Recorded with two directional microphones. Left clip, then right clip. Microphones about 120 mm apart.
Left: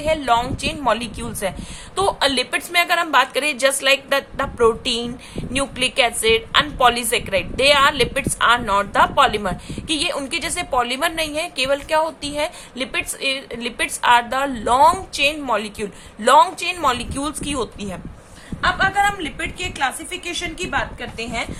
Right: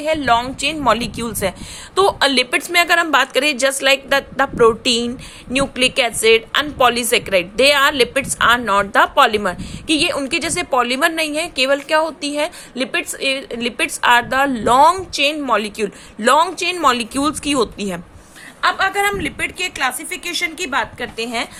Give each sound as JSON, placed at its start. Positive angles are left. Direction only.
{"t": 0.0, "sound": "a woman's voice", "side_deg": -45}
{"t": 2.0, "sound": "a woman's voice", "side_deg": -50}
{"t": 18.6, "sound": "a woman's voice", "side_deg": -90}